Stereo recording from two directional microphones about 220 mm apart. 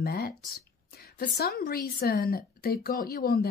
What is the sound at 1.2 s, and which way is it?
Speech, 45° left (ahead or behind).